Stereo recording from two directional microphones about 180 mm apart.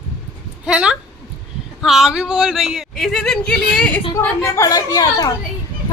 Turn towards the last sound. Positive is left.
turn(degrees=20)  # may be behind; listen again after turning